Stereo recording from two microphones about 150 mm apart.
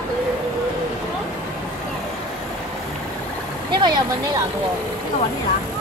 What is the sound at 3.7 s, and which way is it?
Speech, 30° right (ahead or behind).